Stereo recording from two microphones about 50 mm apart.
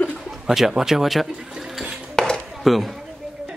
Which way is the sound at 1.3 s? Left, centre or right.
Centre.